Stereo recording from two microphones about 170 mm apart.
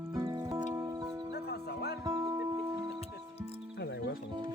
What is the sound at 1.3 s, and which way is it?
Music, 70° left (ahead or behind).